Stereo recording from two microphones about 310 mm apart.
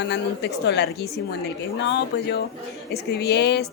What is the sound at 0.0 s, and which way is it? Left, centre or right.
A woman's voice, left.